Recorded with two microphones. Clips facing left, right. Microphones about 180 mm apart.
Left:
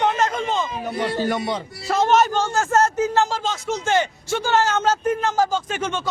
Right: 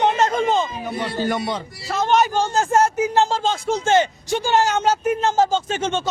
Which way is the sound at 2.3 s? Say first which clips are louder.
Right 1 dB; 15° right (ahead or behind).